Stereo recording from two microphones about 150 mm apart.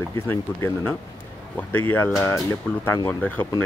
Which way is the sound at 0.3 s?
15° left (ahead or behind).